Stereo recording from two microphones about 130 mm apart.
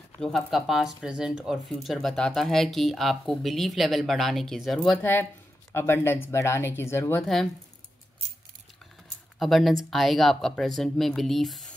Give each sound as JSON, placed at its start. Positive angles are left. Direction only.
{"t": 0.2, "sound": "speech", "side_deg": 5}
{"t": 4.9, "sound": "speech", "side_deg": 15}
{"t": 7.2, "sound": "speech", "side_deg": 5}
{"t": 9.4, "sound": "speech", "side_deg": 0}